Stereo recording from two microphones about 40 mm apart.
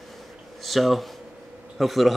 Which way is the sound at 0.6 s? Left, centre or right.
Centre.